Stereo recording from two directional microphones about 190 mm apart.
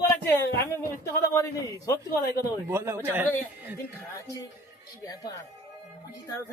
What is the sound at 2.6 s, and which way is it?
Speech, 10° right (ahead or behind).